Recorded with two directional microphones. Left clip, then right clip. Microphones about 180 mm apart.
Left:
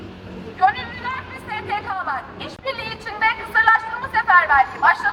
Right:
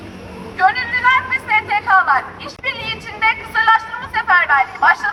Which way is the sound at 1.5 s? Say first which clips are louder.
Right 10 dB; centre (ahead or behind).